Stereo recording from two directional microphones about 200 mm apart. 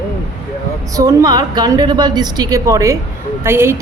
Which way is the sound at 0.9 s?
20° right (ahead or behind).